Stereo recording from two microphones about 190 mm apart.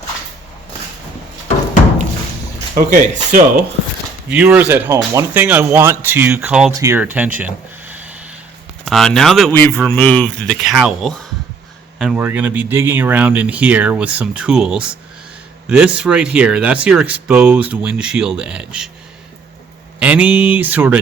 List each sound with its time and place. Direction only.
2.7 s speech: 45° right (ahead or behind)
4.3 s speech: 5° right (ahead or behind)
20.0 s speech: 5° right (ahead or behind)